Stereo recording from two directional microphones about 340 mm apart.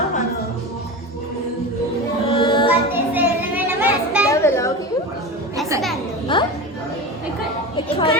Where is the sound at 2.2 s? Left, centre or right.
Centre.